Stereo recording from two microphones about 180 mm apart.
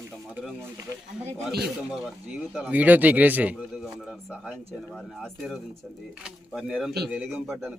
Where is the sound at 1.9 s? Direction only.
5° right (ahead or behind).